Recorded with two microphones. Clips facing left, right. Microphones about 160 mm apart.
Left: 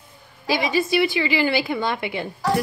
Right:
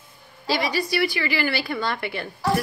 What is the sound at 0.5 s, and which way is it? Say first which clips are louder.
A woman's voice: left 3 dB; 20° left (ahead or behind).